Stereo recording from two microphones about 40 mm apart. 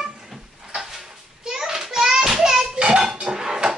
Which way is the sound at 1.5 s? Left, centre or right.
Centre.